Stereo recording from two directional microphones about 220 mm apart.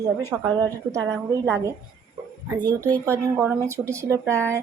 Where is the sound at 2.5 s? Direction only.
20° right (ahead or behind).